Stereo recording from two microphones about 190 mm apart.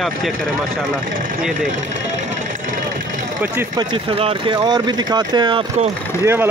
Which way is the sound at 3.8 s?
30° right (ahead or behind).